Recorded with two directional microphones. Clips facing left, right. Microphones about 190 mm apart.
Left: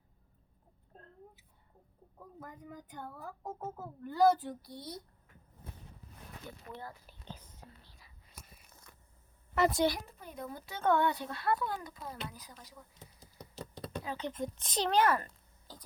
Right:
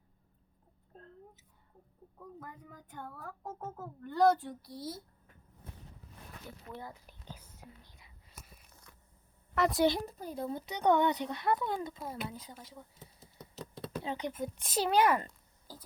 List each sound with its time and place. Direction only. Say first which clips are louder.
2.4 s a child's voice: left 2 dB; 5° left (ahead or behind)
6.8 s whispering: even; 15° right (ahead or behind)
9.6 s a child's voice: left 1 dB; centre (ahead or behind)
10.1 s speech: right 6 dB; 35° right (ahead or behind)
13.6 s a sound: right 1 dB; centre (ahead or behind)
14.0 s speech: right 1 dB; 20° right (ahead or behind)